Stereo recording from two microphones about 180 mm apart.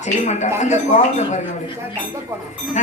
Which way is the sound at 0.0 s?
40° left (ahead or behind).